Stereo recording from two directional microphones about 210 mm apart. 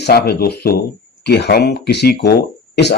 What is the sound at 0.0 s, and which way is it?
Speech, 50° left (ahead or behind).